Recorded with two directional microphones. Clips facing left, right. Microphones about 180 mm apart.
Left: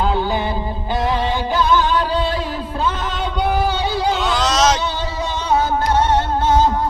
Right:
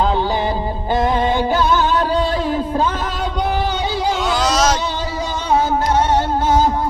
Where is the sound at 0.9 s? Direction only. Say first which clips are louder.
Right 3 dB; 45° right (ahead or behind).